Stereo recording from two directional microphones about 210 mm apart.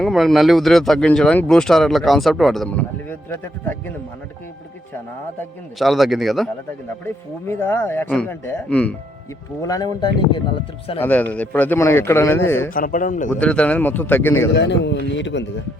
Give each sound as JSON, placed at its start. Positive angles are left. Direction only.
{"t": 0.0, "sound": "speech", "side_deg": 0}
{"t": 5.4, "sound": "speech", "side_deg": 0}
{"t": 7.0, "sound": "a man's voice", "side_deg": 10}
{"t": 9.6, "sound": "a man's voice", "side_deg": 20}
{"t": 11.0, "sound": "a man's voice", "side_deg": 10}
{"t": 12.7, "sound": "speech", "side_deg": 40}
{"t": 13.4, "sound": "a man's voice", "side_deg": 5}
{"t": 14.5, "sound": "a man's voice", "side_deg": 55}